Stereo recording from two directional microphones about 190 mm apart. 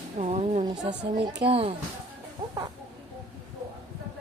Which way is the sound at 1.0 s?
40° right (ahead or behind).